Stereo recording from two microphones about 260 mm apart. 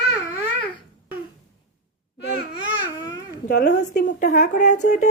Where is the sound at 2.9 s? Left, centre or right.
Centre.